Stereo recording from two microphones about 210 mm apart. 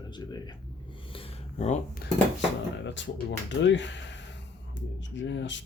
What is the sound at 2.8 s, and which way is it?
Speech, 60° left (ahead or behind).